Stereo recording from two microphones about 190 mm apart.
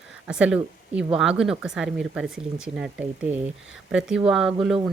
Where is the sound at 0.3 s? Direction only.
5° right (ahead or behind).